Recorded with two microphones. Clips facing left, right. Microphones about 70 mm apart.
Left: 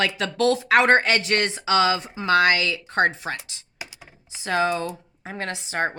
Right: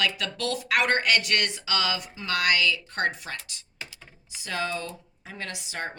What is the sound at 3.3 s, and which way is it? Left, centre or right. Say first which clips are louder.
Computer keyboard: left 2 dB; left.